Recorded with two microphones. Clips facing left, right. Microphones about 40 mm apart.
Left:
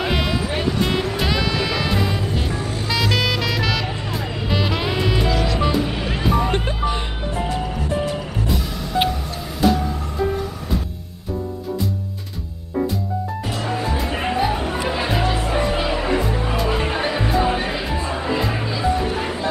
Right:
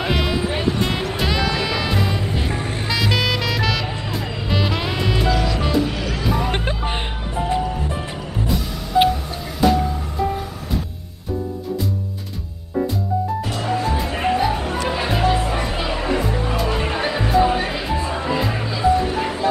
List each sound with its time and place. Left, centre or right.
0.0 s music: centre
5.9 s music: left
6.2 s music: centre
6.5 s music: right
8.5 s music: centre
13.6 s music: centre